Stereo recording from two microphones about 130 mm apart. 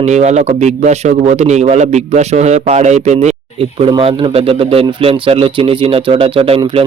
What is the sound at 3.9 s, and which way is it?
Speech, 45° right (ahead or behind).